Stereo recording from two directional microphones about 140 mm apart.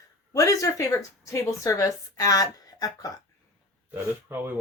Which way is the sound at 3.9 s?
15° right (ahead or behind).